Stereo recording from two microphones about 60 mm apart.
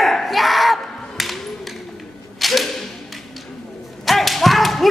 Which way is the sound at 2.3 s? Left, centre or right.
Centre.